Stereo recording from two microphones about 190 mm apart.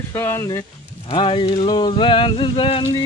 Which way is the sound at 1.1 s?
30° left (ahead or behind).